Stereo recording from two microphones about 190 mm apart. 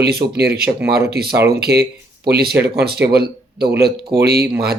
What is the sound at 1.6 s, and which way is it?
Speech, 55° right (ahead or behind).